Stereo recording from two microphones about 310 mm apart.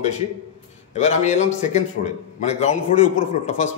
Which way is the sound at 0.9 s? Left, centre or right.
Left.